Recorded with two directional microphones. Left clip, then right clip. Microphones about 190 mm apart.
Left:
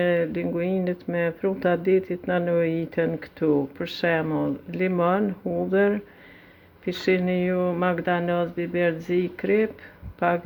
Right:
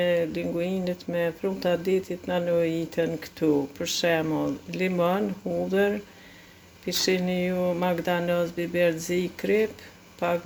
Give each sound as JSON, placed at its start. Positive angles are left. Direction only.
{"t": 0.0, "sound": "speech", "side_deg": 15}